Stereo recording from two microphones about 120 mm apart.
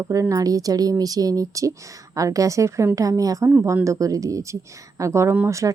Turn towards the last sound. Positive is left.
turn(degrees=-25)  # may be behind; listen again after turning